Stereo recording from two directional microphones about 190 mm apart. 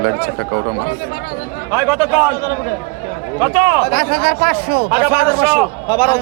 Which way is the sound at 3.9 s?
50° right (ahead or behind).